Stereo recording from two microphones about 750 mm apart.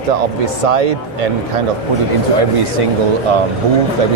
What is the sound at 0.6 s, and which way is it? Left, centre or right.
Speech, right.